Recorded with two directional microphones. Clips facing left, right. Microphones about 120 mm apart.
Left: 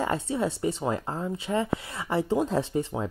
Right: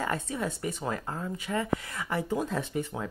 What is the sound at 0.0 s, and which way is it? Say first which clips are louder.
Speech: left 4 dB; 25° left (ahead or behind).